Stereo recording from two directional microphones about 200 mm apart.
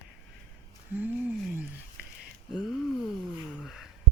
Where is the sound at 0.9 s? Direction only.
10° right (ahead or behind).